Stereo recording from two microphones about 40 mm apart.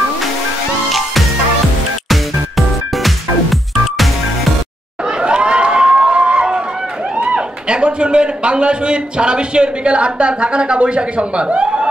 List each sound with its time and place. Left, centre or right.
2.0 s music: centre
5.2 s a sound: right
7.2 s a man's voice: right